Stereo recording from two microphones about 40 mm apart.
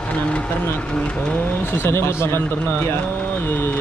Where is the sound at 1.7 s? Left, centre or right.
Left.